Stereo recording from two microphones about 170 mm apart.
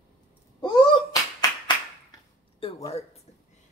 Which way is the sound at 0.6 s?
25° left (ahead or behind).